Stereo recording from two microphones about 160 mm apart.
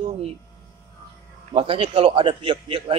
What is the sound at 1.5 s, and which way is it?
Speech, 35° right (ahead or behind).